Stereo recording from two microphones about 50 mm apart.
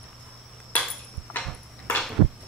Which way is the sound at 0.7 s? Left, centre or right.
Left.